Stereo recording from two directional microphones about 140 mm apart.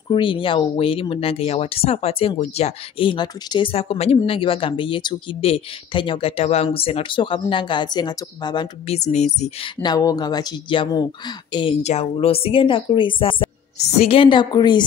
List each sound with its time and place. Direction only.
0.1 s speech: 35° left (ahead or behind)
8.8 s speech: 50° left (ahead or behind)
9.8 s speech: 30° left (ahead or behind)
11.8 s speech: 50° left (ahead or behind)
13.7 s speech: 45° left (ahead or behind); by 14.9 s 30° left (ahead or behind)